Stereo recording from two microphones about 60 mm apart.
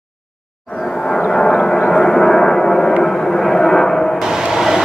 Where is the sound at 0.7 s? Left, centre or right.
Centre.